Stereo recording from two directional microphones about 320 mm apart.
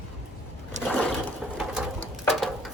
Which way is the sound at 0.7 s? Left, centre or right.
Right.